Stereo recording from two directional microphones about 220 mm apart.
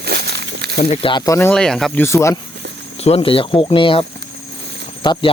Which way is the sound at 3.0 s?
25° left (ahead or behind).